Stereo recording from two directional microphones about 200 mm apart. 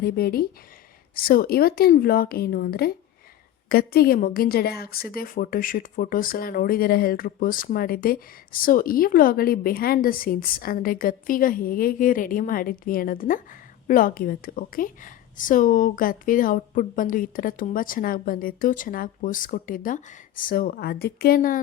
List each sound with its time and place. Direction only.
0.0 s a woman's voice: 50° left (ahead or behind)